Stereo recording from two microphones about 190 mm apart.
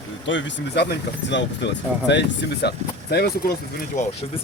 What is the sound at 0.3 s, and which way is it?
Speech, 70° left (ahead or behind).